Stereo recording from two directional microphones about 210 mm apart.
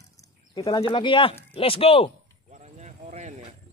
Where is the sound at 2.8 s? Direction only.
35° right (ahead or behind).